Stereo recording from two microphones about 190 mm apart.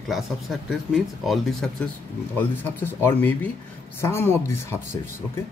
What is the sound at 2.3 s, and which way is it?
Speech, 10° left (ahead or behind).